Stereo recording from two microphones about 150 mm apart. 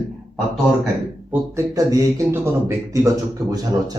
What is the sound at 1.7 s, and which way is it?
Speech, 20° right (ahead or behind).